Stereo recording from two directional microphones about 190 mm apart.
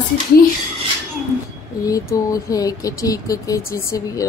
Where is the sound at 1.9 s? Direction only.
15° left (ahead or behind).